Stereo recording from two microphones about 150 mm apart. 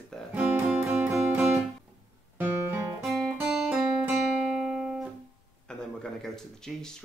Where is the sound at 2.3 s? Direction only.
10° right (ahead or behind).